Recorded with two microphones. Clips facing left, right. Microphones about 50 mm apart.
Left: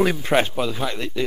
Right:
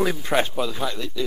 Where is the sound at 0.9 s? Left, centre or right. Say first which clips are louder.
Left 3 dB; left.